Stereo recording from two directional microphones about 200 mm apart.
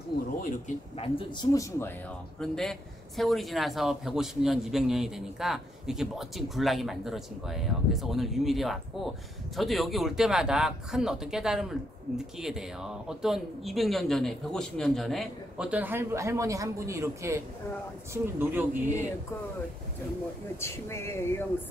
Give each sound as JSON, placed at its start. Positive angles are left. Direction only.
{"t": 0.4, "sound": "speech", "side_deg": 35}
{"t": 2.4, "sound": "a man's voice", "side_deg": 0}
{"t": 20.6, "sound": "speech", "side_deg": 15}